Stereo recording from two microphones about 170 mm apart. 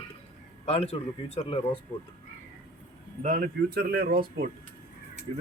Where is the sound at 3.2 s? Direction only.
55° right (ahead or behind).